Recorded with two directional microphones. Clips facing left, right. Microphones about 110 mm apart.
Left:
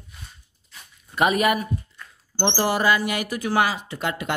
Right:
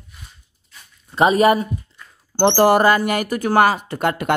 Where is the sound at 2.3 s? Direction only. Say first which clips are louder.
Right 9 dB; 55° right (ahead or behind).